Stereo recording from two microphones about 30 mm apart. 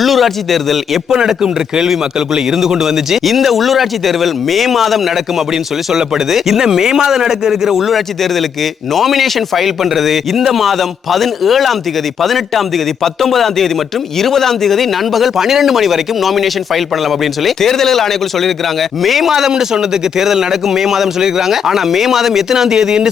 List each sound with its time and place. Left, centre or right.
0.0 s speech: centre
1.3 s a man's voice: centre
3.2 s speech: centre
6.6 s a man's voice: centre
7.9 s speech: centre
15.1 s speech: centre
17.6 s speech: centre
19.3 s a man's voice: centre